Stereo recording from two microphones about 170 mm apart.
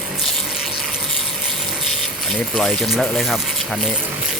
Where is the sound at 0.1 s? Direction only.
Centre (ahead or behind).